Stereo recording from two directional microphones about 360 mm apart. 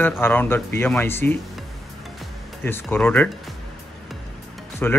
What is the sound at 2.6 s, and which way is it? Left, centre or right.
Speech, centre.